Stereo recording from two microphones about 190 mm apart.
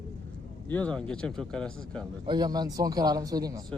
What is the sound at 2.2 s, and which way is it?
Speech, 20° right (ahead or behind).